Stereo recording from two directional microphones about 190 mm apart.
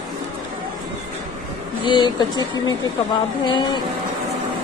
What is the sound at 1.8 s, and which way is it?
Speech, 25° left (ahead or behind).